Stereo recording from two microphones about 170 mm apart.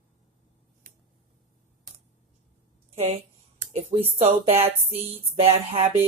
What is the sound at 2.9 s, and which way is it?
A woman's voice, 40° right (ahead or behind).